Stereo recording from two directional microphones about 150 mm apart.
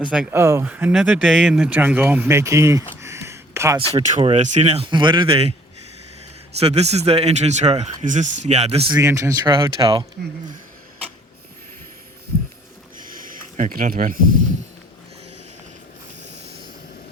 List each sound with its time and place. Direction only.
0.1 s speech: 10° right (ahead or behind)
3.0 s a sound: 20° right (ahead or behind)
3.9 s speech: 45° right (ahead or behind)
4.9 s speech: 30° right (ahead or behind)
6.6 s speech: 45° right (ahead or behind)
8.9 s speech: 20° right (ahead or behind)
9.6 s speech: 30° right (ahead or behind)
13.0 s a sound: 65° right (ahead or behind)